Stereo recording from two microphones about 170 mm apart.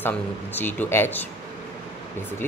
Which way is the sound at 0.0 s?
10° left (ahead or behind).